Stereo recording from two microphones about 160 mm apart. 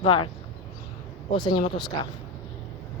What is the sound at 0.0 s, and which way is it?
Speech, 30° left (ahead or behind).